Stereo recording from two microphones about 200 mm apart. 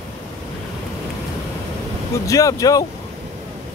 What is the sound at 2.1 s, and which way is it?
Speech, 15° left (ahead or behind).